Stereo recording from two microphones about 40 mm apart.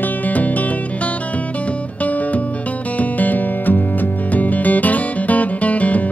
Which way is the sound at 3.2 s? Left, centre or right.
Left.